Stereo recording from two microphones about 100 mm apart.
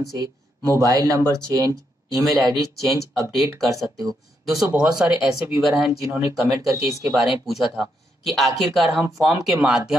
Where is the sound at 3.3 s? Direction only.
Centre (ahead or behind).